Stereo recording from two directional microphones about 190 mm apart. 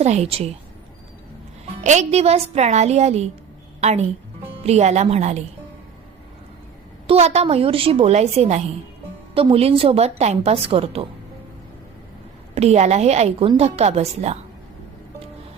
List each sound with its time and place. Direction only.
0.0 s a woman's voice: 35° right (ahead or behind)
1.8 s a woman's voice: 40° right (ahead or behind)
7.1 s a woman's voice: 35° right (ahead or behind)
12.5 s a woman's voice: 35° right (ahead or behind)